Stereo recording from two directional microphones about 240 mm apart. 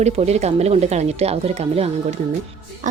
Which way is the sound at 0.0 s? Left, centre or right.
Right.